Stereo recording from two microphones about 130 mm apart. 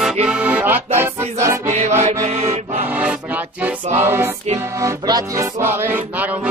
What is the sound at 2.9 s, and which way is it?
Music, 10° right (ahead or behind).